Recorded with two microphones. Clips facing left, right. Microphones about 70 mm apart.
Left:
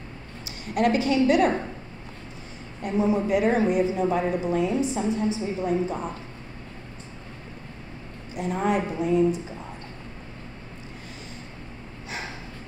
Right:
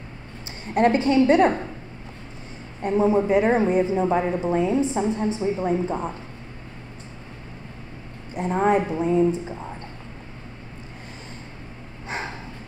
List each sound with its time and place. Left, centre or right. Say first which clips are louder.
0.7 s speech: right 3 dB; right
2.8 s a woman's voice: right 4 dB; right
8.4 s speech: right 4 dB; right